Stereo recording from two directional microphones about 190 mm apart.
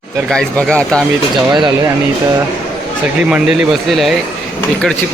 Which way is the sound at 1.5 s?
20° right (ahead or behind).